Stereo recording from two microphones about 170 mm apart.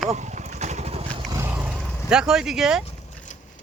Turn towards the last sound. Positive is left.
turn(degrees=45)  # may be behind; listen again after turning